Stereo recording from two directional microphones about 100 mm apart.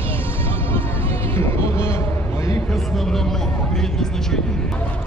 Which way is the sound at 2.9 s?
5° left (ahead or behind).